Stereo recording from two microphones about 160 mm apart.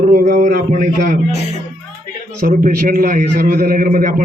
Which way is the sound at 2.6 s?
60° right (ahead or behind).